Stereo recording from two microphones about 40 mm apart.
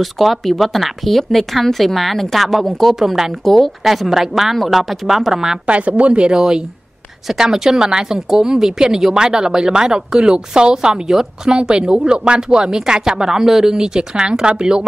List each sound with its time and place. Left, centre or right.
0.0 s speech: centre
3.4 s speech: centre
3.8 s speech: centre
5.7 s a woman's voice: right